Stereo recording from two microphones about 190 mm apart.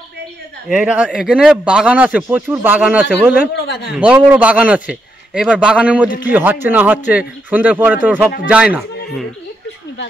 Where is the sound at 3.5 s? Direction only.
65° left (ahead or behind).